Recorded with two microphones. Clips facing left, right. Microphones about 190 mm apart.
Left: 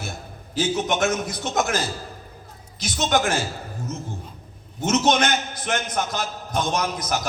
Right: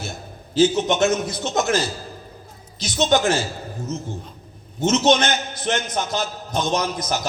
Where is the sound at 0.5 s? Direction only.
25° right (ahead or behind).